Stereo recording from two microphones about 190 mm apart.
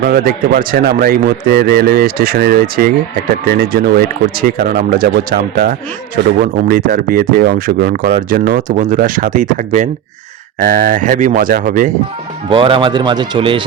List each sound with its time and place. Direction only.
0.0 s speech: 50° right (ahead or behind)
12.5 s speech: 30° right (ahead or behind)